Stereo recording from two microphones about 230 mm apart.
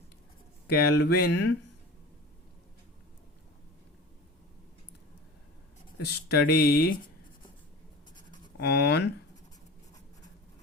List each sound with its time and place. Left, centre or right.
0.7 s speech: left
1.3 s speech: left
6.1 s speech: left
8.5 s speech: left